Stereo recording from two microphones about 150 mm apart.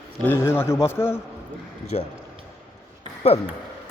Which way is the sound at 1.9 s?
45° left (ahead or behind).